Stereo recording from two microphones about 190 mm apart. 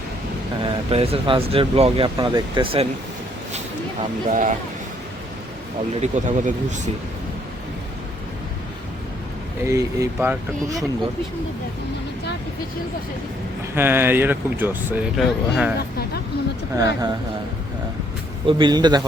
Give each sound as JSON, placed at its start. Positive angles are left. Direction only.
{"t": 0.6, "sound": "speech", "side_deg": -30}
{"t": 4.3, "sound": "speech", "side_deg": -40}
{"t": 6.0, "sound": "speech", "side_deg": -40}
{"t": 9.6, "sound": "speech", "side_deg": -15}
{"t": 13.7, "sound": "speech", "side_deg": -10}
{"t": 16.7, "sound": "speech", "side_deg": -15}
{"t": 18.4, "sound": "speech", "side_deg": -25}